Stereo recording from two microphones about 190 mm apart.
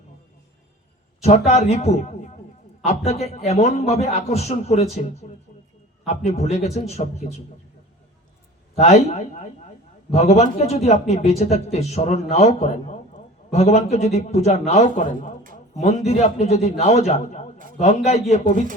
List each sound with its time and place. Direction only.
1.2 s a man's voice: 35° left (ahead or behind)
6.1 s a man's voice: 35° left (ahead or behind)
8.8 s a man's voice: 35° left (ahead or behind)